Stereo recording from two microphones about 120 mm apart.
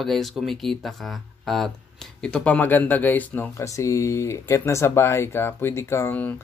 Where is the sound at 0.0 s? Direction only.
Centre (ahead or behind).